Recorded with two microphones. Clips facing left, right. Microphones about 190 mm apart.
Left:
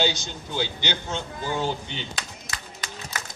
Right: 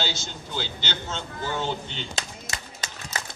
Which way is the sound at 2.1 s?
25° right (ahead or behind).